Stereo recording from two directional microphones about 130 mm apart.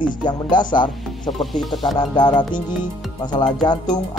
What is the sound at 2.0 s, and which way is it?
Speech, 35° left (ahead or behind).